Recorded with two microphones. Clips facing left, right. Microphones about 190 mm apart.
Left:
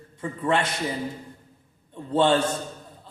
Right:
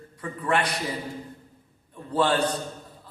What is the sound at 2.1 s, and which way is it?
Speech, 25° left (ahead or behind).